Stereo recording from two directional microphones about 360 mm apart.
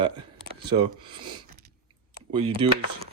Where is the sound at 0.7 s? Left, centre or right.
Centre.